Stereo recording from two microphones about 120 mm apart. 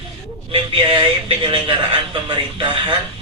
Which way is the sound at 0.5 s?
45° right (ahead or behind).